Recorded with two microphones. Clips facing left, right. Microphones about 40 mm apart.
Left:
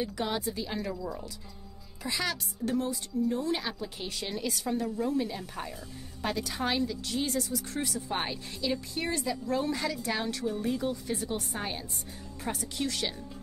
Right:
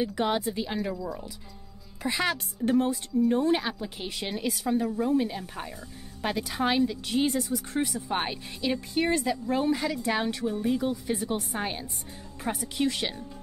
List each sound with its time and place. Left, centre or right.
0.0 s a woman's voice: right
0.9 s speech: centre
2.0 s a woman's voice: right
3.5 s a woman's voice: right
8.5 s a woman's voice: right